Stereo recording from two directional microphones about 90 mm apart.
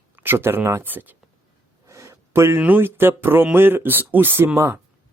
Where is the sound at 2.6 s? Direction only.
20° right (ahead or behind).